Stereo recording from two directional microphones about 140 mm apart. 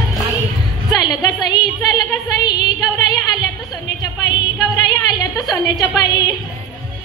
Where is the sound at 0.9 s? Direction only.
30° left (ahead or behind).